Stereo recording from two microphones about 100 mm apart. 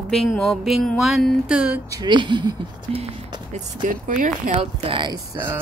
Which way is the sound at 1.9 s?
45° right (ahead or behind).